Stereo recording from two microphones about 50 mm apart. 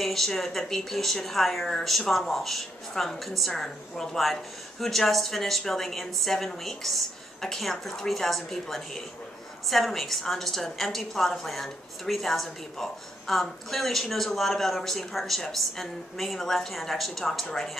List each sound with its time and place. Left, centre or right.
0.0 s speech: centre